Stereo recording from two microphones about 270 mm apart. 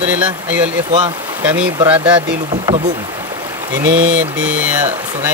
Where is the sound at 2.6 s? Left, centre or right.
Centre.